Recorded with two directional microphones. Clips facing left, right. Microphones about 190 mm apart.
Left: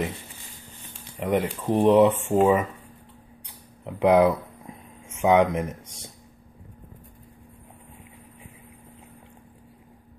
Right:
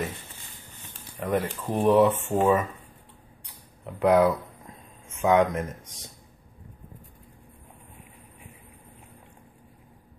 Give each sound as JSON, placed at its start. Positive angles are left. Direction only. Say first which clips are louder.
{"t": 1.1, "sound": "speech", "louder": "left 3 dB", "side_deg": 15}
{"t": 3.8, "sound": "speech", "louder": "left 2 dB", "side_deg": 20}